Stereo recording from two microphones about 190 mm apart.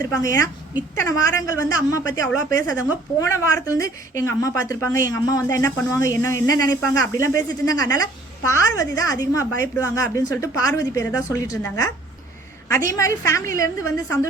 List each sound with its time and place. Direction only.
0.0 s speech: 20° left (ahead or behind)
12.9 s speech: 15° left (ahead or behind)